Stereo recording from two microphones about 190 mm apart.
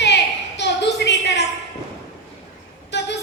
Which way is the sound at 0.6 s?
65° left (ahead or behind).